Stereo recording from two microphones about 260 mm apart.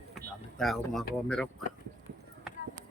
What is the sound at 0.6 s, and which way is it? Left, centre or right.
Speech, centre.